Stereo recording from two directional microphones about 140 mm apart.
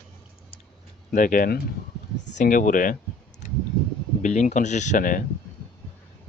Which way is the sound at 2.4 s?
70° left (ahead or behind).